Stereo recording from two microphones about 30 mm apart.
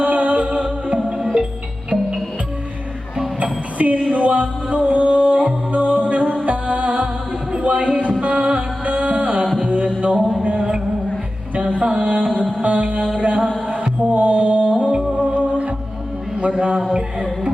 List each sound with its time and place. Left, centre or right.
0.0 s music: right
0.9 s music: centre
3.4 s music: right
9.6 s mantra: right
11.5 s music: right
14.1 s mantra: right
14.8 s music: right
16.4 s a sound: right
16.7 s speech: right